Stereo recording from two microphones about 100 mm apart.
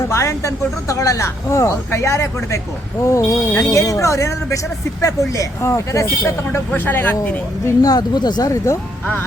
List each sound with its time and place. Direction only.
0.1 s speech: 30° left (ahead or behind)
6.7 s speech: 20° left (ahead or behind)
7.8 s speech: 40° left (ahead or behind)